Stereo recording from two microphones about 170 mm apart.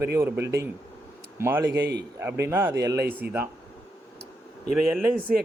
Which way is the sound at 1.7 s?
80° right.